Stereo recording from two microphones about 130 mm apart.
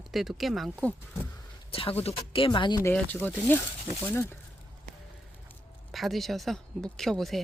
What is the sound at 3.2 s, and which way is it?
Speech, 15° left (ahead or behind).